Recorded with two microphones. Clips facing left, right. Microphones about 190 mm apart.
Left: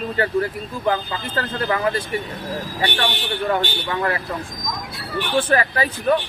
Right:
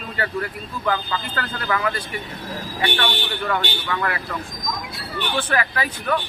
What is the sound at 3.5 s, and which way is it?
Speech, 30° left (ahead or behind).